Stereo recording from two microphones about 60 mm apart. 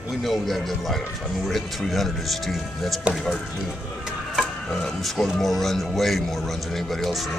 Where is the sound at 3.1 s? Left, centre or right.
Centre.